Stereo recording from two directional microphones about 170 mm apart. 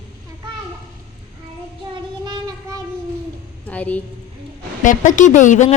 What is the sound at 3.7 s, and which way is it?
Speech, 10° left (ahead or behind).